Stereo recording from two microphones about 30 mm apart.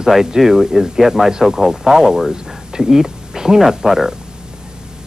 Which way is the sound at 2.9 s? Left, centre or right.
Centre.